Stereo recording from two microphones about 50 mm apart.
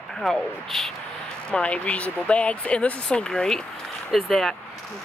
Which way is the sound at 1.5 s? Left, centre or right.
Left.